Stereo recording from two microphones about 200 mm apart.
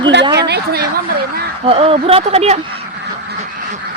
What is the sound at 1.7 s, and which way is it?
Speech, 30° right (ahead or behind).